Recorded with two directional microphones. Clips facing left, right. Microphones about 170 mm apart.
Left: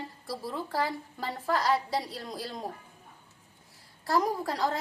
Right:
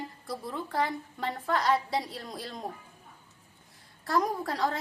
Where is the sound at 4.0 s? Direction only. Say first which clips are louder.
Left 1 dB; centre (ahead or behind).